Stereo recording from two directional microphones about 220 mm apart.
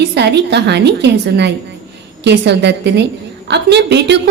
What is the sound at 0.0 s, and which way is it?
Speech, 50° right (ahead or behind).